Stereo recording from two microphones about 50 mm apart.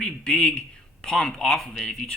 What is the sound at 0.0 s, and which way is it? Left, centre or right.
Speech, centre.